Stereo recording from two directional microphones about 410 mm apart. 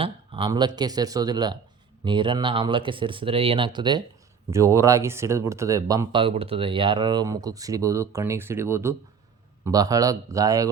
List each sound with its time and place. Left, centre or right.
0.0 s a man's voice: centre